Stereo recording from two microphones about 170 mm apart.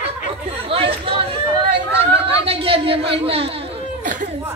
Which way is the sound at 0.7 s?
35° right (ahead or behind).